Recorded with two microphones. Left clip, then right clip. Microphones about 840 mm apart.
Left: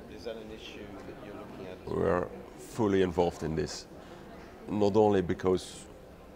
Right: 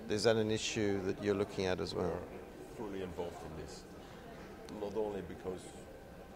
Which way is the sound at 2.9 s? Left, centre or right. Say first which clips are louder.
Left 15 dB; left.